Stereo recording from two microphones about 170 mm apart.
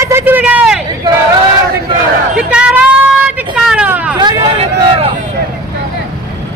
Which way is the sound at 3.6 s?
5° right (ahead or behind).